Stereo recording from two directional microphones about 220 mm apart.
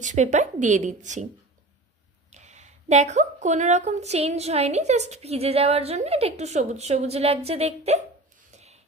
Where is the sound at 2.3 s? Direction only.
30° right (ahead or behind).